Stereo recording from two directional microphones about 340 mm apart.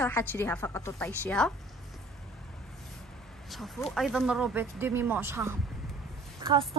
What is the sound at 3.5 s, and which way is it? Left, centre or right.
A woman's voice, centre.